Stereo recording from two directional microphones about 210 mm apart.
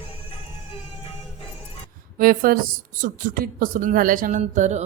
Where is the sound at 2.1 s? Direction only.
40° right (ahead or behind).